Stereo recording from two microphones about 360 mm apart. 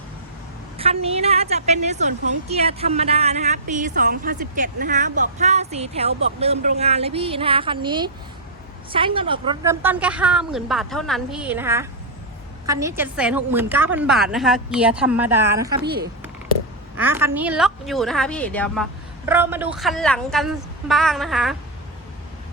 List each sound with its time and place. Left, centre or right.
0.8 s a woman's voice: centre
15.8 s speech: right
17.0 s a woman's voice: centre